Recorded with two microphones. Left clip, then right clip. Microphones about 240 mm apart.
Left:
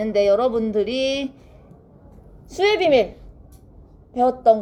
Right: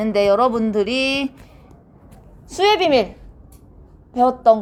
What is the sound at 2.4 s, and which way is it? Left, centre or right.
Speech, right.